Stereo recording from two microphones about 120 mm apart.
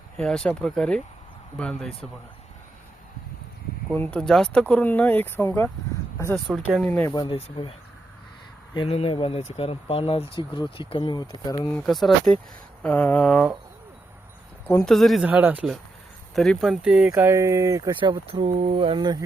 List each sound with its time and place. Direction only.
0.2 s speech: 5° left (ahead or behind)
3.9 s speech: 10° left (ahead or behind)
6.5 s speech: centre (ahead or behind)
6.8 s speech: 15° left (ahead or behind)
7.1 s speech: 40° left (ahead or behind)
7.3 s speech: 50° left (ahead or behind)
8.9 s speech: 60° left (ahead or behind); by 11.7 s 30° left (ahead or behind)
11.7 s speech: 5° left (ahead or behind)
14.8 s speech: centre (ahead or behind)
15.3 s speech: 15° right (ahead or behind)
16.3 s speech: centre (ahead or behind)
17.2 s speech: 20° right (ahead or behind)